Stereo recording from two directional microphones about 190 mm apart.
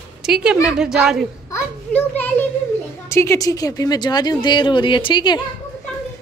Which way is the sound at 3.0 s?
15° left (ahead or behind).